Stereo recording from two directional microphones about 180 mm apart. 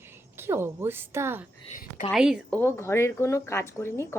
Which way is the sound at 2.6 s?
15° left (ahead or behind).